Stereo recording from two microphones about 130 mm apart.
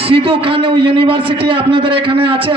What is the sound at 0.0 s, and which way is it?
A man's voice, 45° right (ahead or behind).